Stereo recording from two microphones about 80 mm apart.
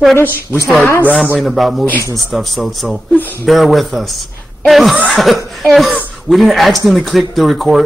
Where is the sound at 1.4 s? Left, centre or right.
Centre.